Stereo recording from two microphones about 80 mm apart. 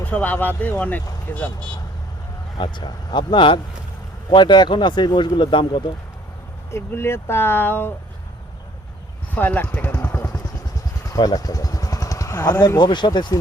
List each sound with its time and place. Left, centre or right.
0.0 s speech: left
2.6 s a man's voice: left
6.7 s speech: left
9.3 s speech: left
11.2 s vehicle: left
12.6 s a man's voice: left